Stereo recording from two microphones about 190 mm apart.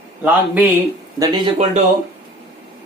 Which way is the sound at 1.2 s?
25° right (ahead or behind).